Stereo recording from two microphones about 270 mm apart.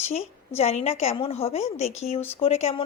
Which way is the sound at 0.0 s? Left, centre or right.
Left.